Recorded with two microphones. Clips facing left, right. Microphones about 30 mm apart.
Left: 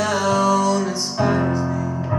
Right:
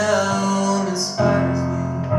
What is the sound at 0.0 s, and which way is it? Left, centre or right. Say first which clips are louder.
Music: even; centre.